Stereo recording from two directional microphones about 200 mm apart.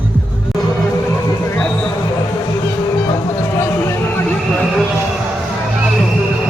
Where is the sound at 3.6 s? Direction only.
15° left (ahead or behind).